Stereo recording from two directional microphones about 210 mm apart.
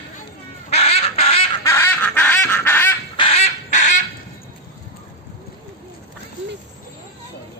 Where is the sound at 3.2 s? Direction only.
30° left (ahead or behind).